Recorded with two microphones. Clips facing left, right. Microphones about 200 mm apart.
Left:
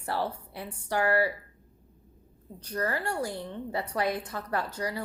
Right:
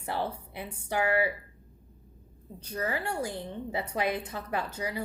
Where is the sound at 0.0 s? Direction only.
20° right (ahead or behind).